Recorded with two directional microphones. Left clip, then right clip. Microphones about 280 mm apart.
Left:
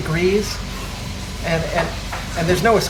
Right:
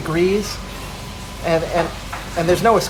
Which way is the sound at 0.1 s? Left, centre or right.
Centre.